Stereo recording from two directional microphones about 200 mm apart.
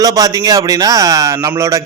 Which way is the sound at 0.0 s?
15° right (ahead or behind).